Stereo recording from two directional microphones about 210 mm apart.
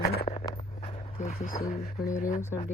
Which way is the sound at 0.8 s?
30° left (ahead or behind).